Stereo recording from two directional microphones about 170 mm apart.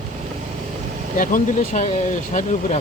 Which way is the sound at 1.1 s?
50° left (ahead or behind).